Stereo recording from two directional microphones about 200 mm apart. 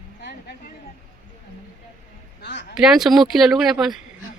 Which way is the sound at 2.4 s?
60° left (ahead or behind).